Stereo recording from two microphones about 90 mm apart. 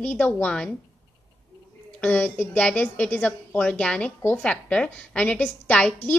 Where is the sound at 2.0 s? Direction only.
20° left (ahead or behind).